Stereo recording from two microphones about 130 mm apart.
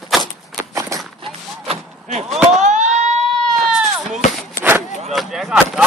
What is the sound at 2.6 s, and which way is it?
Siren, 65° right (ahead or behind).